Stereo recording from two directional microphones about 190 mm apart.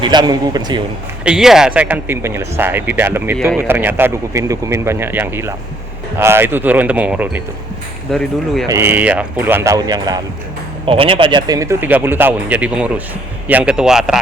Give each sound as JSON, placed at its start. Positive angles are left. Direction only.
{"t": 0.0, "sound": "a man's voice", "side_deg": -25}
{"t": 1.2, "sound": "speech", "side_deg": -5}
{"t": 8.1, "sound": "a man's voice", "side_deg": 5}
{"t": 8.6, "sound": "a man's voice", "side_deg": -15}